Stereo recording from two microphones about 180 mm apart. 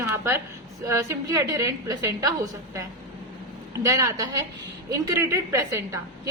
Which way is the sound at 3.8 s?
15° right (ahead or behind).